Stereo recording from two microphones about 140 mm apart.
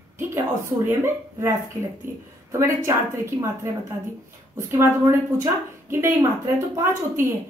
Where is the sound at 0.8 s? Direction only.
15° right (ahead or behind).